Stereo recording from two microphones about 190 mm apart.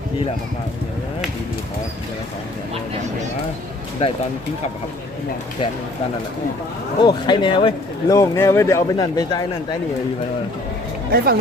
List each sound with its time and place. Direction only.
7.0 s a man's voice: 25° left (ahead or behind)
11.1 s speech: 50° right (ahead or behind)